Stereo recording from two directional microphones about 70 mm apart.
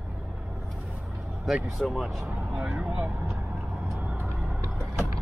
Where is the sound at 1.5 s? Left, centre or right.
Centre.